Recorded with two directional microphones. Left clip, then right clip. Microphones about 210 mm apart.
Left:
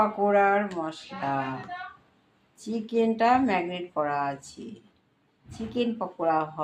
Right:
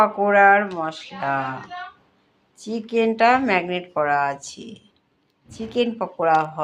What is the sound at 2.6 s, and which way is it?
A woman's voice, 25° right (ahead or behind).